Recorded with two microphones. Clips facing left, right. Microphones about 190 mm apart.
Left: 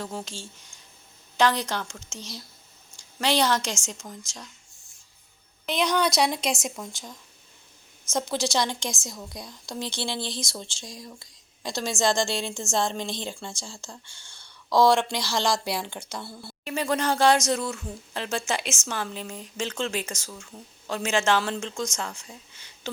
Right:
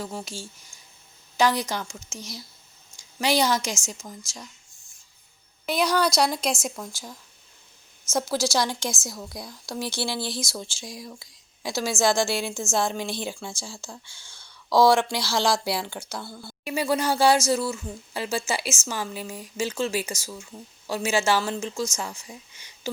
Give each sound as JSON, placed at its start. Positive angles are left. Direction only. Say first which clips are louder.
{"t": 0.0, "sound": "speech", "louder": "right 1 dB", "side_deg": -10}
{"t": 5.6, "sound": "a woman's voice", "louder": "right 1 dB", "side_deg": -5}
{"t": 16.6, "sound": "speech", "louder": "right 1 dB", "side_deg": -10}